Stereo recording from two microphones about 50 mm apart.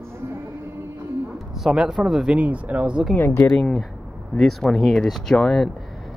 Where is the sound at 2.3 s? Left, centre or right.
Right.